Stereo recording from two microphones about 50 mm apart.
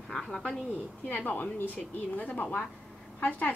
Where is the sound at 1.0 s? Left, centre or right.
Left.